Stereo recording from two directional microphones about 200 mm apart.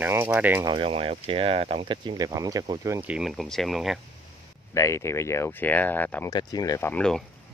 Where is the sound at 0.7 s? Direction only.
25° right (ahead or behind); by 4.0 s centre (ahead or behind).